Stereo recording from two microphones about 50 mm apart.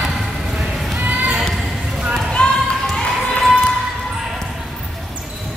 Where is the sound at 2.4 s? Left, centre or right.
Centre.